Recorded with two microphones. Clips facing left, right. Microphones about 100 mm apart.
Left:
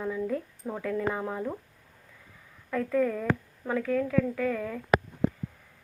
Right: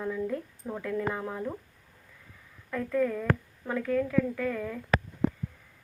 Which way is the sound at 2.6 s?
10° left (ahead or behind).